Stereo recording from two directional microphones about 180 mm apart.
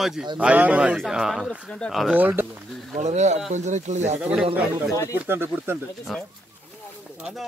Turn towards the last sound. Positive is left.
turn(degrees=-5)  # may be behind; listen again after turning